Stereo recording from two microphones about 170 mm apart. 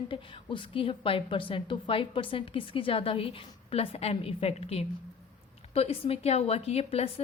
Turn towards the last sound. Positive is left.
turn(degrees=35)  # may be behind; listen again after turning